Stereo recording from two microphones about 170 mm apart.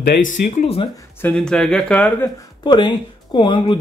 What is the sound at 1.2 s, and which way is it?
Speech, 5° left (ahead or behind).